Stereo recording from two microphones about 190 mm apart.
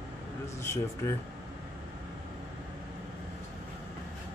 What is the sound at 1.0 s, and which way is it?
Speech, 15° left (ahead or behind).